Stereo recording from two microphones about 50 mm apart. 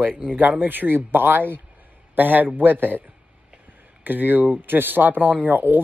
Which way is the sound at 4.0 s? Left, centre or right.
Right.